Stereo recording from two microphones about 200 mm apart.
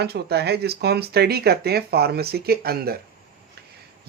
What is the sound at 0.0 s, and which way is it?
Speech, 55° right (ahead or behind).